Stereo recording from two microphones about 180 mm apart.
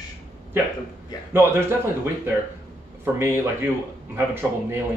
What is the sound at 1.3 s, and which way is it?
A man's voice, 10° right (ahead or behind).